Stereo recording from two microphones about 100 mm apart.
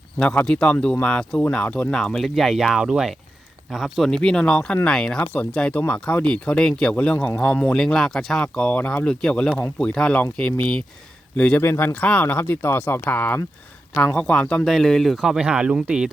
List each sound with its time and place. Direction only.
0.2 s speech: 5° left (ahead or behind)
4.1 s speech: 5° left (ahead or behind)
11.6 s speech: 25° left (ahead or behind); by 16.0 s 10° right (ahead or behind)